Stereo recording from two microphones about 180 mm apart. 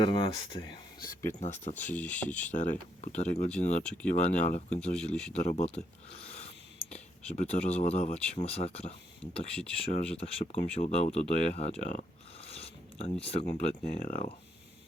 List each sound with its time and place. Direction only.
0.0 s speech: 25° left (ahead or behind)
1.4 s speech: 40° left (ahead or behind)
1.8 s speech: 10° left (ahead or behind)
2.5 s speech: 45° left (ahead or behind)
3.8 s speech: 5° left (ahead or behind)
4.1 s speech: 40° left (ahead or behind)
4.9 s speech: 5° left (ahead or behind)
5.3 s speech: 40° left (ahead or behind)
10.4 s speech: 50° left (ahead or behind)
10.7 s speech: 35° left (ahead or behind)
13.8 s speech: 50° left (ahead or behind)